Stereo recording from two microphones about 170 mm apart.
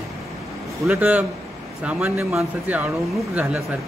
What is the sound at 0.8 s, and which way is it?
Speech, 10° right (ahead or behind).